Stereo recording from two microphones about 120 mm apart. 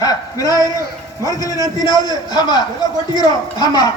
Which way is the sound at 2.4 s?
35° left (ahead or behind).